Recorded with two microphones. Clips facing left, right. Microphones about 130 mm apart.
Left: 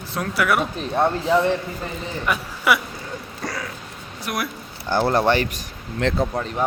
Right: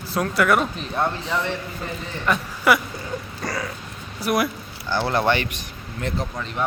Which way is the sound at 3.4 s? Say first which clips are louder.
Right 1 dB; centre (ahead or behind).